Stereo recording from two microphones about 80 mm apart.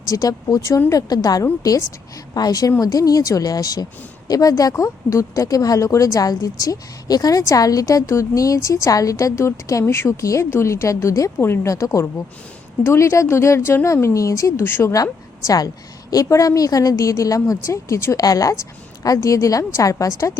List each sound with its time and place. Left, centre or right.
0.1 s speech: left
9.8 s a woman's voice: left
10.1 s speech: left
12.8 s speech: left
14.6 s a woman's voice: left
14.9 s speech: left